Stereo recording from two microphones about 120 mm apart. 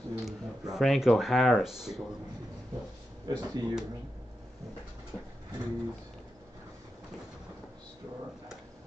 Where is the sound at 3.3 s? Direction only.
35° right (ahead or behind).